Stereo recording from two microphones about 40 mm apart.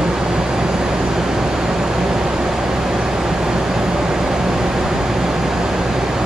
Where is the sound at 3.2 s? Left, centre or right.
Centre.